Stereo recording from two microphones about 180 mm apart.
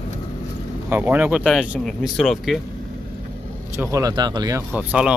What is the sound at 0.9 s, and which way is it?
Speech, 10° right (ahead or behind).